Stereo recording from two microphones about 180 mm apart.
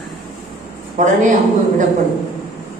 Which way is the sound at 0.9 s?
45° right (ahead or behind).